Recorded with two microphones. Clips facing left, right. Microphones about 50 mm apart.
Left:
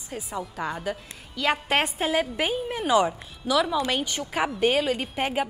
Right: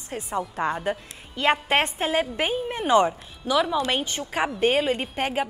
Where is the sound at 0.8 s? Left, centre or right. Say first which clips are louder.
Right 3 dB; right.